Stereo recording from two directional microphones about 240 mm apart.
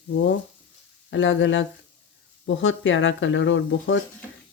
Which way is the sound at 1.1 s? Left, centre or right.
Left.